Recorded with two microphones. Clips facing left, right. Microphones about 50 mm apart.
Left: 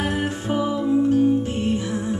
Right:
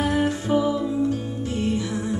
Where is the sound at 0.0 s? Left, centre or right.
Left.